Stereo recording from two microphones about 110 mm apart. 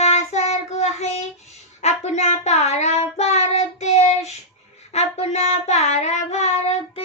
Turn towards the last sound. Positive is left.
turn(degrees=70)  # may be behind; listen again after turning